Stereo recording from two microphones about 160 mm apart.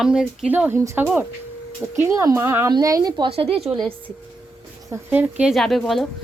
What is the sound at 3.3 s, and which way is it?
Speech, 35° right (ahead or behind).